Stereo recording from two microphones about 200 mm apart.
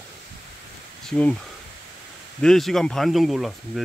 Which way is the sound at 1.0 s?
5° left (ahead or behind).